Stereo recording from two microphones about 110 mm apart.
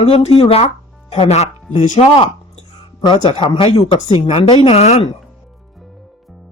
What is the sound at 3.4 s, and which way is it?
Speech, 55° left (ahead or behind).